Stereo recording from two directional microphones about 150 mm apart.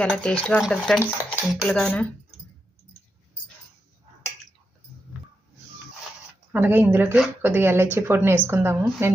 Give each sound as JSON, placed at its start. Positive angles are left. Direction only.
{"t": 0.0, "sound": "speech", "side_deg": 10}
{"t": 6.5, "sound": "speech", "side_deg": -15}